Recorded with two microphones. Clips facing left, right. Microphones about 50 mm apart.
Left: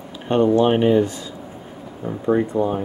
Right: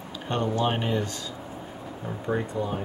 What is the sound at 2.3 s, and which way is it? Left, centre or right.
Speech, left.